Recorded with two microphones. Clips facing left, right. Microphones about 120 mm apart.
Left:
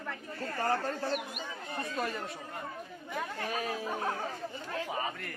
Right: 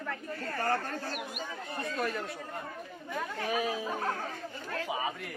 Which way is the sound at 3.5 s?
5° right (ahead or behind).